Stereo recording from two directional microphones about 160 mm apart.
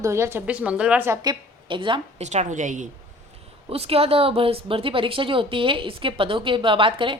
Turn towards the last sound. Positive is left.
turn(degrees=-30)  # may be behind; listen again after turning